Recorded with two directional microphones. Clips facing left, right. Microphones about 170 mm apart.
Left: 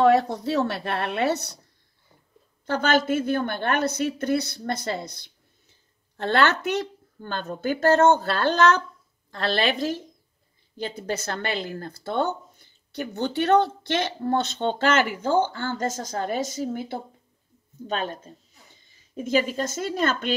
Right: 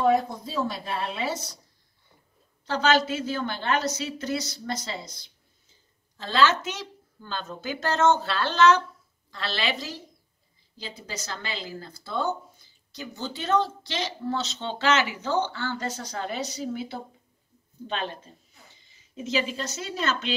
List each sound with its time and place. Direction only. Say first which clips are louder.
0.0 s a woman's voice: left 4 dB; 75° left (ahead or behind)
2.6 s a woman's voice: left 1 dB; 55° left (ahead or behind)